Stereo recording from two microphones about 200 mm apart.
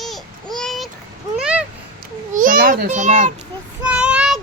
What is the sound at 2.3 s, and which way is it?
A child's voice, 45° right (ahead or behind).